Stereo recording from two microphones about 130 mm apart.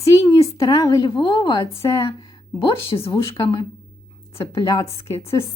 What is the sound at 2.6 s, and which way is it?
A woman's voice, 40° left (ahead or behind).